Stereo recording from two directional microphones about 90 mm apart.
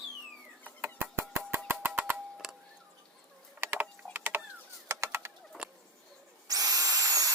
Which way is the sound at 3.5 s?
25° right (ahead or behind).